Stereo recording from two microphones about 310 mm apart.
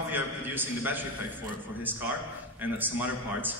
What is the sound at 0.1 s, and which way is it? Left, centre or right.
A man's voice, centre.